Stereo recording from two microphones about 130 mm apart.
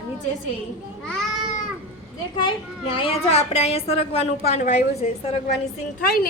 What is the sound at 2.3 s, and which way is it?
A child's voice, 40° left (ahead or behind).